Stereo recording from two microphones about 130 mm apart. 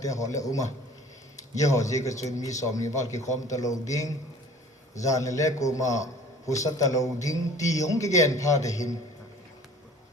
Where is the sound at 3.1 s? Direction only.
65° left (ahead or behind).